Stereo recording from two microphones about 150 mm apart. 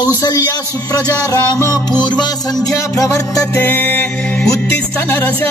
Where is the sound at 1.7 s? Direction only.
30° left (ahead or behind); by 4.5 s 10° left (ahead or behind).